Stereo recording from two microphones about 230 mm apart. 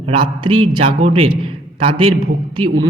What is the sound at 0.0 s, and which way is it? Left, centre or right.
A man's voice, right.